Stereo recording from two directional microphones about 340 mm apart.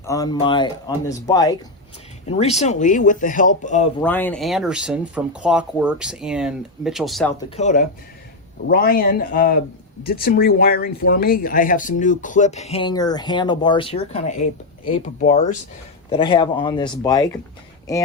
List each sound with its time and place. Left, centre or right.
0.0 s speech: centre
4.0 s speech: centre
7.5 s speech: left